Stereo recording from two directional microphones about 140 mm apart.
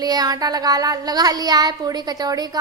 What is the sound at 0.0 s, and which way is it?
A woman's voice, 30° right (ahead or behind).